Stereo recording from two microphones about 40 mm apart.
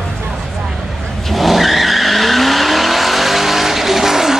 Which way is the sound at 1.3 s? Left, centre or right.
Centre.